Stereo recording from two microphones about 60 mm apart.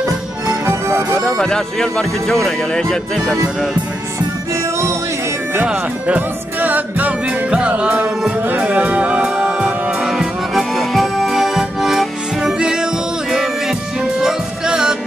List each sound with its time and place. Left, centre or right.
0.0 s music: right
1.4 s speech: centre
5.7 s music: right
10.1 s accordion: centre
13.3 s music: centre